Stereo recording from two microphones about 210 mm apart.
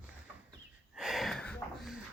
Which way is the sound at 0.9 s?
Centre (ahead or behind).